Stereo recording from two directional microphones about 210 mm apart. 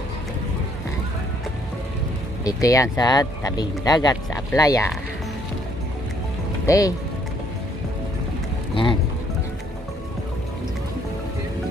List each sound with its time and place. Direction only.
2.4 s speech: 15° left (ahead or behind)
6.6 s speech: 15° left (ahead or behind)